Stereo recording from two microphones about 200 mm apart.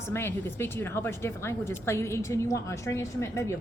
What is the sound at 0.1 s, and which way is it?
A woman's voice, 10° left (ahead or behind).